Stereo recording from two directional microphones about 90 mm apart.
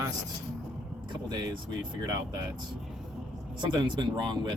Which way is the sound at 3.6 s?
60° right (ahead or behind).